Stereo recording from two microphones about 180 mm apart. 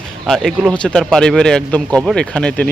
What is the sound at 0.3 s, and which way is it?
Speech, centre (ahead or behind).